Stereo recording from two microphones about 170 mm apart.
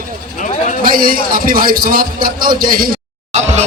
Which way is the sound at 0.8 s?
55° right (ahead or behind).